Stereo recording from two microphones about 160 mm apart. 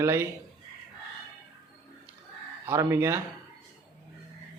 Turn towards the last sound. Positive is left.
turn(degrees=-15)  # may be behind; listen again after turning